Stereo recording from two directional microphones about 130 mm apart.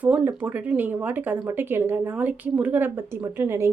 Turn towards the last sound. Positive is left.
turn(degrees=-20)  # may be behind; listen again after turning